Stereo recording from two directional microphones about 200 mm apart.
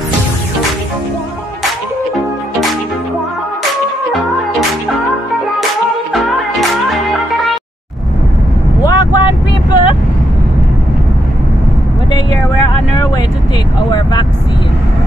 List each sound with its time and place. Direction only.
6.8 s music: centre (ahead or behind)
8.8 s vehicle: 20° left (ahead or behind)
12.1 s vehicle: 20° left (ahead or behind)